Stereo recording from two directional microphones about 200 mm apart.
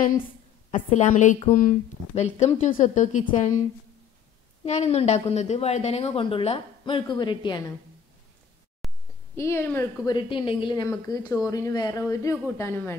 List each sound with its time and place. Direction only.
0.7 s a woman's voice: 35° left (ahead or behind)
4.6 s a woman's voice: 35° left (ahead or behind)
8.8 s a sound: centre (ahead or behind)
9.3 s a woman's voice: 10° left (ahead or behind)